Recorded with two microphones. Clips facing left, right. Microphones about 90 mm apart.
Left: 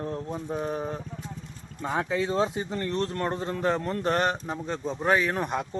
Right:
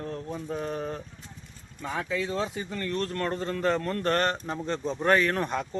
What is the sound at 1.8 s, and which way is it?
Speech, 30° left (ahead or behind).